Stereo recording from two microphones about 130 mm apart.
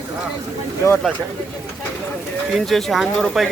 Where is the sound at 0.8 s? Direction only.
25° left (ahead or behind).